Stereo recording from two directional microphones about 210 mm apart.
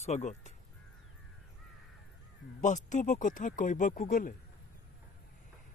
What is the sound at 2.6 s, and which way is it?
Speech, 35° left (ahead or behind).